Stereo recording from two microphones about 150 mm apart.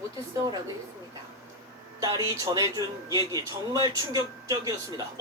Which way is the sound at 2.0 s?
25° right (ahead or behind).